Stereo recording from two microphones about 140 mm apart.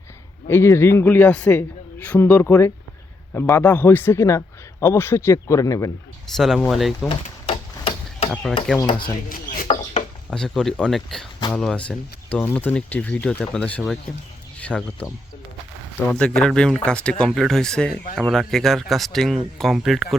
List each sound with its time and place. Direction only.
0.4 s speech: 20° left (ahead or behind)
6.2 s speech: centre (ahead or behind)
7.1 s a sound: 40° left (ahead or behind)
8.3 s speech: 5° left (ahead or behind)
8.9 s speech: 35° left (ahead or behind)
9.3 s a sound: 90° left
10.2 s speech: 5° left (ahead or behind)
16.1 s speech: 5° left (ahead or behind)